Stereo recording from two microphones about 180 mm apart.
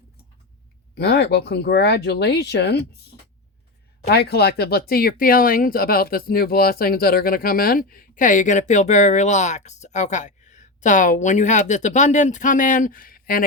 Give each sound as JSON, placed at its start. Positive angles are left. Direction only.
{"t": 0.9, "sound": "speech", "side_deg": 65}
{"t": 4.0, "sound": "speech", "side_deg": 65}